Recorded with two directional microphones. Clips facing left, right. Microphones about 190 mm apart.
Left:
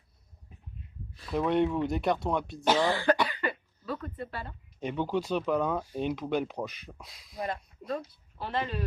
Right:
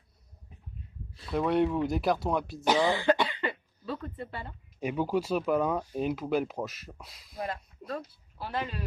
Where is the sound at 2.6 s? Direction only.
15° right (ahead or behind).